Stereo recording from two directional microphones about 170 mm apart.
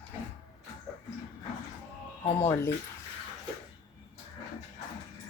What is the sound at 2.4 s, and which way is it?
Speech, 15° left (ahead or behind).